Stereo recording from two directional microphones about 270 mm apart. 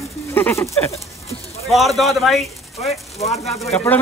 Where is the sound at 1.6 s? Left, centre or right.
Centre.